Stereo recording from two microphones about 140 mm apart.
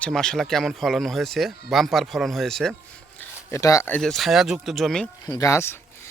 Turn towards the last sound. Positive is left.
turn(degrees=20)  # may be behind; listen again after turning